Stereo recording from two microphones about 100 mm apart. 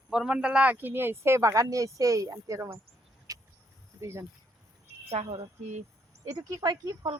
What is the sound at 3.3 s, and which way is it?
Vehicle, 35° right (ahead or behind).